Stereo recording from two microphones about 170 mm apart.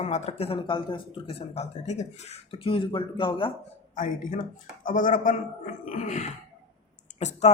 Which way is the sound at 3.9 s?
50° left (ahead or behind).